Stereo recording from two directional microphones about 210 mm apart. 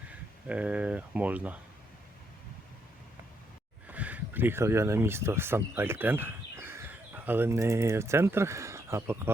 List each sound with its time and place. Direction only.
0.4 s speech: 5° right (ahead or behind)
3.8 s speech: 5° right (ahead or behind)